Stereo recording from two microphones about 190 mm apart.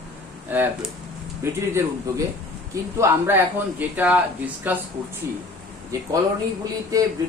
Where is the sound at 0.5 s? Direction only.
10° right (ahead or behind).